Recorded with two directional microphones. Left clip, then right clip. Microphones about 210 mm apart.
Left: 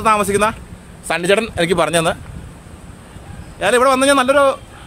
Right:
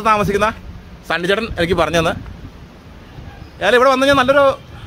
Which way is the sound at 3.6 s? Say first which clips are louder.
Right 1 dB; 5° left (ahead or behind).